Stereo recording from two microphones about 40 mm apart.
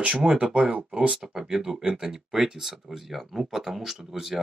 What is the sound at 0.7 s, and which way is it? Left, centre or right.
Speech, right.